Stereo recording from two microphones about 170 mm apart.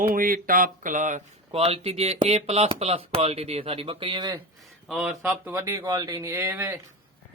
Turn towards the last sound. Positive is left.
turn(degrees=-15)  # may be behind; listen again after turning